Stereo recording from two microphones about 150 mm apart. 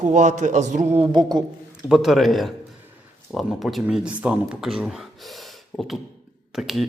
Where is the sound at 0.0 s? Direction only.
55° right (ahead or behind).